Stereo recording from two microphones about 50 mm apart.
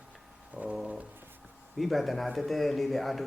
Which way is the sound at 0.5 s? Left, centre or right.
Right.